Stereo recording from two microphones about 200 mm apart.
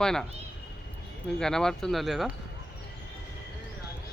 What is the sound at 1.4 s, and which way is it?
Speech, 5° left (ahead or behind).